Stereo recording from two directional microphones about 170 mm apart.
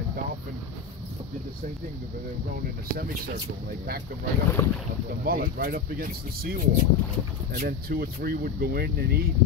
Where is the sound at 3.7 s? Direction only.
65° right (ahead or behind).